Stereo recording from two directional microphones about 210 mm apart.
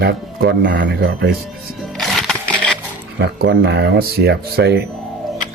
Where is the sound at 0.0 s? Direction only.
50° right (ahead or behind).